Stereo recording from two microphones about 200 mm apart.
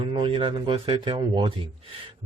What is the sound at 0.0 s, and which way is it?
Speech, 25° right (ahead or behind).